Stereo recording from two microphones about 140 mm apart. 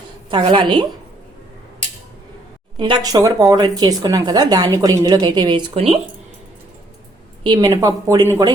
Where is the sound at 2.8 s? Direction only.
30° right (ahead or behind).